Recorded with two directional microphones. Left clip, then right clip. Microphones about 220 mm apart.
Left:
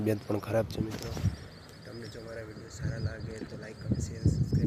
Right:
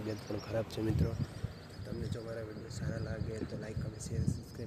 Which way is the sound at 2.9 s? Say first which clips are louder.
Even; 10° right (ahead or behind).